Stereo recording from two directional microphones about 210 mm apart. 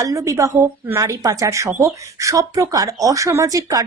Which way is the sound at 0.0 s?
15° right (ahead or behind).